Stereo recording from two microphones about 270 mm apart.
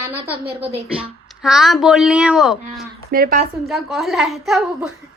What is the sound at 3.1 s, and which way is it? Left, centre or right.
Speech, right.